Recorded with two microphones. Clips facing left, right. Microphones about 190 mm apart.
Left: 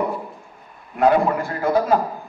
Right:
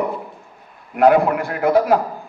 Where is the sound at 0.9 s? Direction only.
70° right (ahead or behind).